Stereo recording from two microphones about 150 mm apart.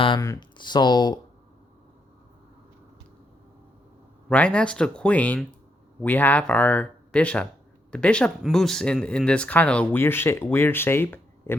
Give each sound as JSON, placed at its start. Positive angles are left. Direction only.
{"t": 0.2, "sound": "speech", "side_deg": 20}
{"t": 4.3, "sound": "speech", "side_deg": 10}